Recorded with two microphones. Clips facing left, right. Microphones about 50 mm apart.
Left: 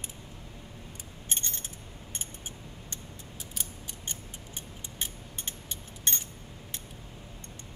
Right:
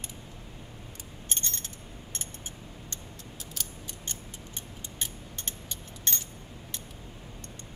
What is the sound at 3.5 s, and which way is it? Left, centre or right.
Mechanisms, left.